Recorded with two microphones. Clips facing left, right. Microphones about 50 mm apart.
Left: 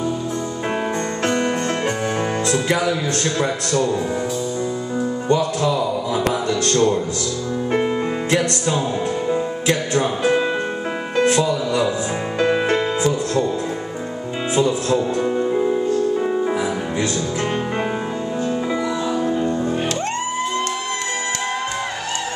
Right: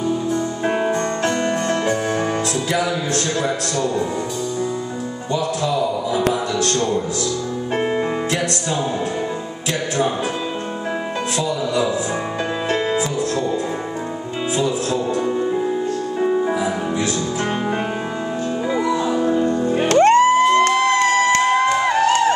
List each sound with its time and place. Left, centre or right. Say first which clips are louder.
11.1 s speech: left 9 dB; left
15.2 s music: left 1 dB; centre
19.1 s music: right 2 dB; centre
19.4 s music: right 2 dB; centre
19.9 s music: right 11 dB; right
20.7 s music: right 9 dB; right
21.0 s music: right 9 dB; right